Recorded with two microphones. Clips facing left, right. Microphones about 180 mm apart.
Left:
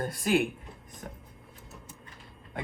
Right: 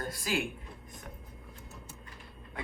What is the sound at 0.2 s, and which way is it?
Speech, 55° left (ahead or behind).